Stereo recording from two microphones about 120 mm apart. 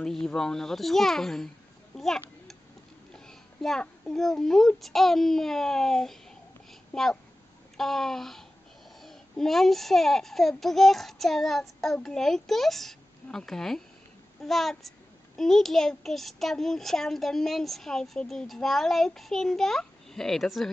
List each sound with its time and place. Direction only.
0.0 s a child's voice: 5° left (ahead or behind)
2.0 s a sound: centre (ahead or behind)
4.1 s a child's voice: centre (ahead or behind)